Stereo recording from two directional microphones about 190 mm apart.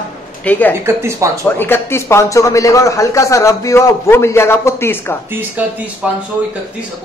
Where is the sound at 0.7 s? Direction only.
15° right (ahead or behind).